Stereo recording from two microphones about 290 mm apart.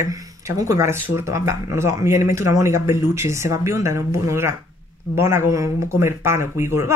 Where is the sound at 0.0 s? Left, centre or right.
Centre.